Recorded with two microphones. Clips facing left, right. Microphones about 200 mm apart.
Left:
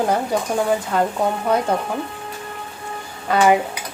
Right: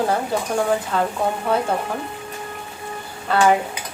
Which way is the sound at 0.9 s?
15° left (ahead or behind).